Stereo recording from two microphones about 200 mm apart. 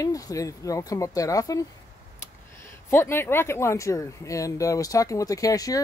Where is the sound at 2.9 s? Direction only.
10° left (ahead or behind).